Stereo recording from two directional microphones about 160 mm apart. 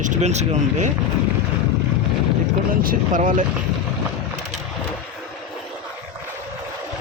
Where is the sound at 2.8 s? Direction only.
55° right (ahead or behind).